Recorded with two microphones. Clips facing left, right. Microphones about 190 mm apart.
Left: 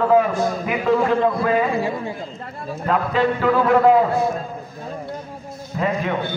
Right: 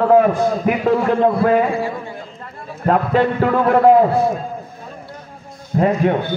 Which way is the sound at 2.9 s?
50° right (ahead or behind).